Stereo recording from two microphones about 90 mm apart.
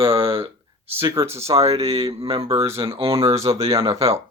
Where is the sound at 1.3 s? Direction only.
90° right.